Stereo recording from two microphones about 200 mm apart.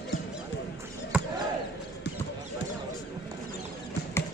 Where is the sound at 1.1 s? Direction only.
5° right (ahead or behind).